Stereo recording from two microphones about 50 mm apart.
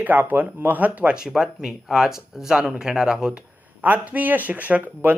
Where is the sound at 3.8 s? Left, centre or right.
Right.